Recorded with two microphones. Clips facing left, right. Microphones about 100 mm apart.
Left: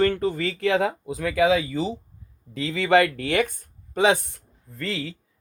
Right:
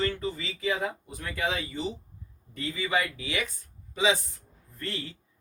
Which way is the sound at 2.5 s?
90° left.